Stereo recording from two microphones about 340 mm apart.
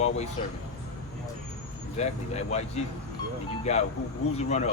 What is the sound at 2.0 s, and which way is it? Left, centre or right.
Speech, centre.